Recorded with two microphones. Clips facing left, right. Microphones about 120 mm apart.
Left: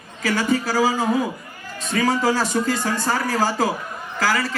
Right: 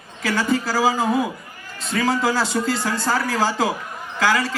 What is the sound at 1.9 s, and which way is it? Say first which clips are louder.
A man's voice: left 1 dB; 45° left (ahead or behind).